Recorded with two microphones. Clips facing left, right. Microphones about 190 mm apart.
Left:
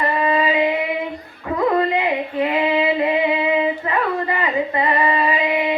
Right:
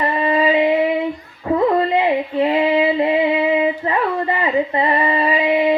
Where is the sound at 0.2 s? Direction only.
30° right (ahead or behind).